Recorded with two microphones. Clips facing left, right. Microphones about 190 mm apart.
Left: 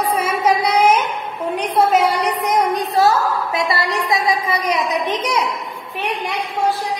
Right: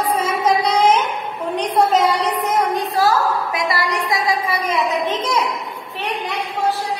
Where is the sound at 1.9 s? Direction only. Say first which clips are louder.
Left 1 dB; 10° left (ahead or behind).